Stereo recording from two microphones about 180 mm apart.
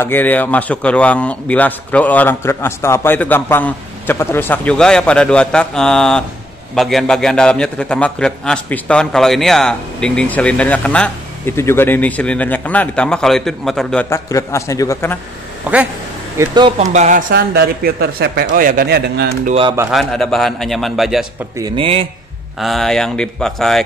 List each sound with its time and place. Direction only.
0.0 s a man's voice: 10° left (ahead or behind)
14.0 s a man's voice: 15° left (ahead or behind)
15.7 s speech: 5° right (ahead or behind)
16.3 s speech: 25° right (ahead or behind)
16.9 s speech: 40° right (ahead or behind)
17.3 s a man's voice: 65° right (ahead or behind)
19.9 s a man's voice: centre (ahead or behind)
21.5 s speech: 25° right (ahead or behind)
22.6 s a man's voice: centre (ahead or behind)